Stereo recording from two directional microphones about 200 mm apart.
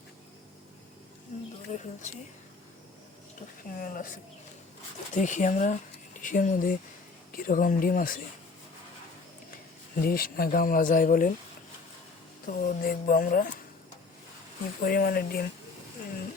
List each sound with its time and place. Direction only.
1.3 s a sound: 40° left (ahead or behind)
1.7 s speech: 35° left (ahead or behind)
3.8 s speech: 45° left (ahead or behind)
5.1 s speech: 40° left (ahead or behind)
9.9 s speech: 50° left (ahead or behind)
12.5 s speech: 45° left (ahead or behind)
14.8 s speech: 45° left (ahead or behind)